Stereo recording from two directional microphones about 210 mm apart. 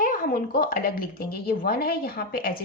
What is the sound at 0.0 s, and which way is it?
Speech, 40° left (ahead or behind).